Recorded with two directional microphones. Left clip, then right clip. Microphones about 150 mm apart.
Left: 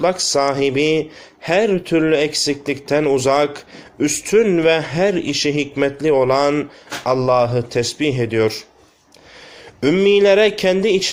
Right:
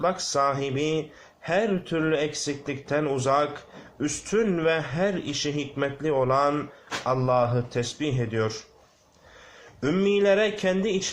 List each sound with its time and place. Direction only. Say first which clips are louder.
0.0 s a man's voice: left 7 dB; 35° left (ahead or behind)
9.8 s a man's voice: left 9 dB; 40° left (ahead or behind)